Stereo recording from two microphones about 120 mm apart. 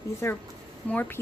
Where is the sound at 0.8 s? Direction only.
15° left (ahead or behind).